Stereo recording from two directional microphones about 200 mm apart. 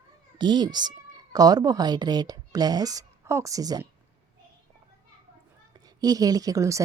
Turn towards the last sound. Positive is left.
turn(degrees=-15)  # may be behind; listen again after turning